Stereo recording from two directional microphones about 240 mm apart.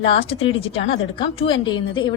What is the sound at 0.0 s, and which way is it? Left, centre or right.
A woman's voice, left.